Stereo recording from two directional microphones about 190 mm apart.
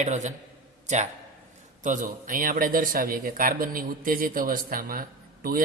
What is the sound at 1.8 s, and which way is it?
A man's voice, 45° right (ahead or behind).